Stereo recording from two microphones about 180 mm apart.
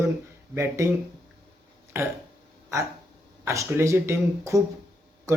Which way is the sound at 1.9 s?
15° right (ahead or behind).